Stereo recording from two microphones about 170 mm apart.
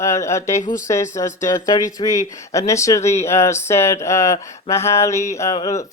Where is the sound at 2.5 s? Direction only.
15° left (ahead or behind).